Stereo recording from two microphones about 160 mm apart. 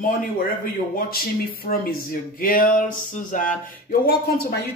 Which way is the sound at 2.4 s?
60° left (ahead or behind).